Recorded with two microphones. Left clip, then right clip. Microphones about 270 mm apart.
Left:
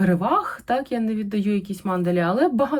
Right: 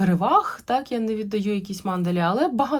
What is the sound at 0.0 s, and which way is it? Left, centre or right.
Speech, centre.